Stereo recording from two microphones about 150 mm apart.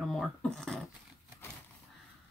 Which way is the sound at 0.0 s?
Centre (ahead or behind).